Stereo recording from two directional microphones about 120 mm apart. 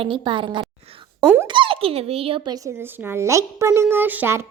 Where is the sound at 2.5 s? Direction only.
30° right (ahead or behind).